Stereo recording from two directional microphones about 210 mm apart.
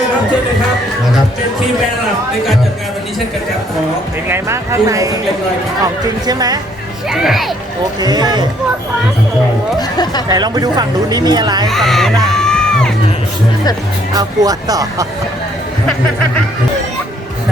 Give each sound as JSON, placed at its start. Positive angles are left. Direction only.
{"t": 4.3, "sound": "speech", "side_deg": -15}
{"t": 7.1, "sound": "speech", "side_deg": 0}
{"t": 8.0, "sound": "speech", "side_deg": -20}
{"t": 9.7, "sound": "speech", "side_deg": 20}
{"t": 10.2, "sound": "speech", "side_deg": -20}
{"t": 11.7, "sound": "speech", "side_deg": 0}
{"t": 14.1, "sound": "speech", "side_deg": -20}